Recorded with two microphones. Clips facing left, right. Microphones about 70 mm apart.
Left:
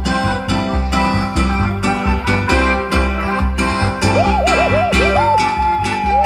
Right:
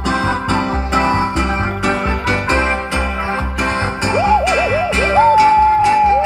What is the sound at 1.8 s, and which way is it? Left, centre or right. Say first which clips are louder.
Music: right 1 dB; right.